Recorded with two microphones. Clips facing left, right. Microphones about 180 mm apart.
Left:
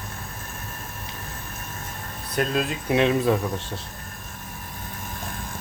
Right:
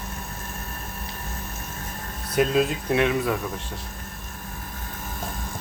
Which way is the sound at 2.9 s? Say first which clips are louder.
Left 4 dB; 25° left (ahead or behind).